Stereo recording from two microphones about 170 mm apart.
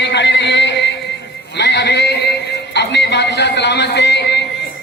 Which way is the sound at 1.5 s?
90° left.